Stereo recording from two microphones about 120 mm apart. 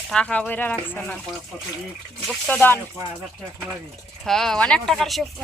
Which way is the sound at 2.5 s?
15° left (ahead or behind).